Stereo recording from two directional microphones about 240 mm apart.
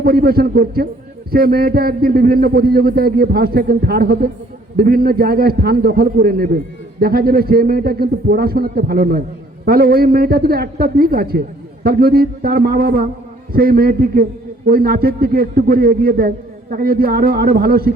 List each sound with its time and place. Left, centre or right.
0.0 s a man's voice: right